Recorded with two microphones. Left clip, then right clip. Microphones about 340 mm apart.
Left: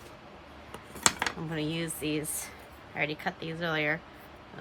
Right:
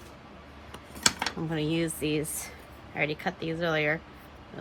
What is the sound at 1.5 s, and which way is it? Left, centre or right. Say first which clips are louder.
Speech: right 4 dB; centre.